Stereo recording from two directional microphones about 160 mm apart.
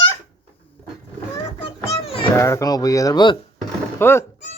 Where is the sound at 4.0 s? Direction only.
15° left (ahead or behind).